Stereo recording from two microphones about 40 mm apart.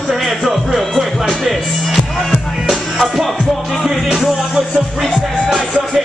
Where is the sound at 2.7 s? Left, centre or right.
Centre.